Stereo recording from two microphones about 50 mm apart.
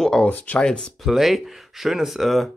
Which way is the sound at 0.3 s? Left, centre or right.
Left.